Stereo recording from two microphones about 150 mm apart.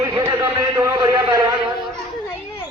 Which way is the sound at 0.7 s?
25° right (ahead or behind).